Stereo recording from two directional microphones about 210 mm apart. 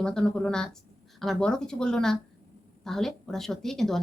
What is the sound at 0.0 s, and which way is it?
A woman's voice, 5° left (ahead or behind).